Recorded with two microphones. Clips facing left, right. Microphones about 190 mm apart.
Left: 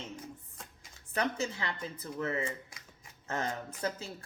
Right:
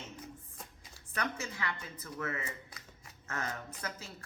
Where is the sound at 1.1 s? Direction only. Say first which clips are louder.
Left 5 dB; 30° left (ahead or behind).